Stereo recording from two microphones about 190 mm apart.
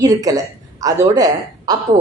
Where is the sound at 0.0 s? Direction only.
20° right (ahead or behind).